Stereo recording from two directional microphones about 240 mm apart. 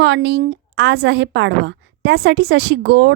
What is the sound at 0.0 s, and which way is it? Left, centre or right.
A woman's voice, right.